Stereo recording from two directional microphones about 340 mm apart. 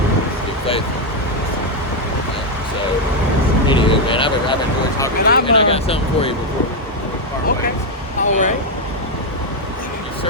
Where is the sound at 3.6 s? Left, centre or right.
Centre.